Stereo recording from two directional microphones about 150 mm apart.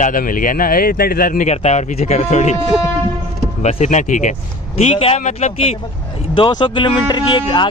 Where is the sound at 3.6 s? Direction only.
50° left (ahead or behind).